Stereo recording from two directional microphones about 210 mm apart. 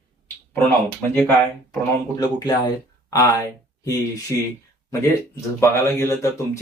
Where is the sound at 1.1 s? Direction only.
Centre (ahead or behind).